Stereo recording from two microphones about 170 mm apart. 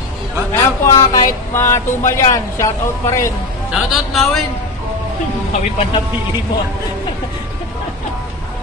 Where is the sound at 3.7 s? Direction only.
Centre (ahead or behind).